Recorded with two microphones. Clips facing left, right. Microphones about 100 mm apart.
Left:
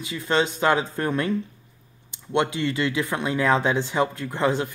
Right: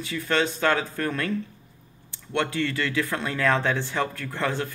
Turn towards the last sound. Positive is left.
turn(degrees=20)  # may be behind; listen again after turning